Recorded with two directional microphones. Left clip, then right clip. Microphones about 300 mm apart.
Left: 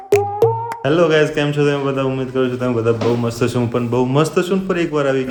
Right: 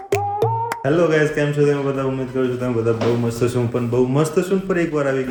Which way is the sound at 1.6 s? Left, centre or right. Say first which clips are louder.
Left 2 dB; centre.